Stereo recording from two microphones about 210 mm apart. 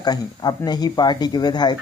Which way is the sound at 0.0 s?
20° left (ahead or behind).